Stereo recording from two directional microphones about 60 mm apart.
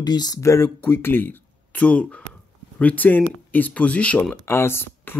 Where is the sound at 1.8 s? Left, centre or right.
Left.